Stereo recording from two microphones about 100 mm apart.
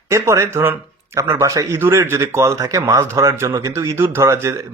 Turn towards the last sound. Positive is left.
turn(degrees=-25)  # may be behind; listen again after turning